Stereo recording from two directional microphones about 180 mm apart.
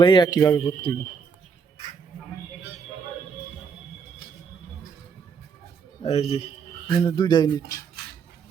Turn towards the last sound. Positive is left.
turn(degrees=25)  # may be behind; listen again after turning